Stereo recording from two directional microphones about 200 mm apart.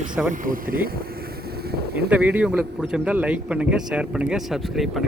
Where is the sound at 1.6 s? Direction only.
50° right (ahead or behind).